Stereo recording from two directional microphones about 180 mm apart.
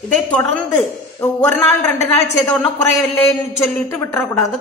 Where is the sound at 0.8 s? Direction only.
10° left (ahead or behind).